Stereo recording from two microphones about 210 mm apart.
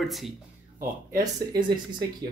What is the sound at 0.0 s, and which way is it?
Speech, centre (ahead or behind).